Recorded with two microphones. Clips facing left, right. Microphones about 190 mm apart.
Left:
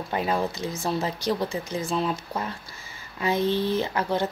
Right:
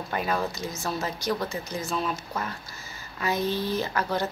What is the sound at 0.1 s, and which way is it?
Speech, 25° left (ahead or behind).